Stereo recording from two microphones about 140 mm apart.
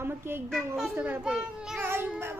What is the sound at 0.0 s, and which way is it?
A child's voice, 15° right (ahead or behind).